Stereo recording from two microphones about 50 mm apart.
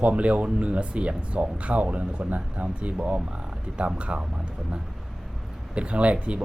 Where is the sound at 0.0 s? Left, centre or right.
Right.